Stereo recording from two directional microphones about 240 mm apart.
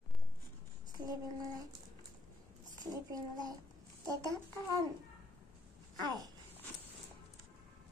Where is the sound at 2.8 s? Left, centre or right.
Centre.